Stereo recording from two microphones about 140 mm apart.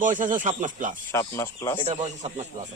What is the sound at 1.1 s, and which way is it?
Speech, 20° left (ahead or behind).